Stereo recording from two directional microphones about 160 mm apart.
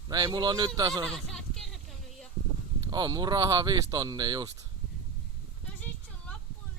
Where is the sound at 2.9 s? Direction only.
25° right (ahead or behind).